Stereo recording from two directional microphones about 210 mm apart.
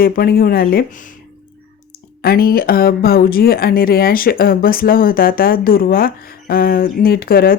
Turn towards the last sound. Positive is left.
turn(degrees=45)  # may be behind; listen again after turning